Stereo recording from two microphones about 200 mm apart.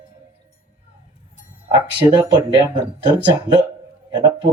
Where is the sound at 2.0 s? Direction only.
20° right (ahead or behind).